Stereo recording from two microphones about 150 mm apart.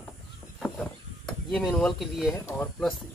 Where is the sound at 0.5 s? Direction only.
5° left (ahead or behind).